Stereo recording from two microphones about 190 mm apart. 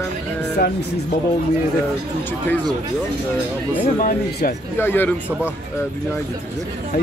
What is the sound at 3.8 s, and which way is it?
Speech, 50° left (ahead or behind).